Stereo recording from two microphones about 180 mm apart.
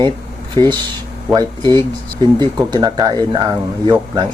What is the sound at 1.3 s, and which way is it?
Speech, 25° right (ahead or behind).